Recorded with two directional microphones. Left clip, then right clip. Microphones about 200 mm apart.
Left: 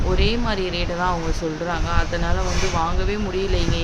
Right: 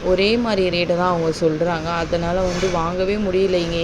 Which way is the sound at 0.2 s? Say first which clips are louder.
Right 5 dB; 20° right (ahead or behind).